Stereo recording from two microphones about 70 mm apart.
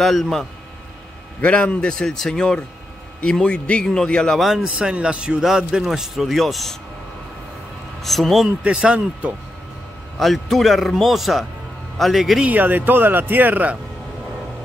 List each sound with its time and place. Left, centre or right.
0.0 s a man's voice: centre
1.4 s a man's voice: centre
4.4 s a man's voice: centre
4.6 s a man's voice: centre
8.0 s a man's voice: centre
8.5 s a man's voice: centre
10.1 s a man's voice: centre
12.4 s speech: right